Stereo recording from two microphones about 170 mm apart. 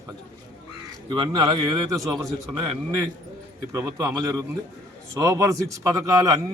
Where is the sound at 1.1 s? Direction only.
25° right (ahead or behind).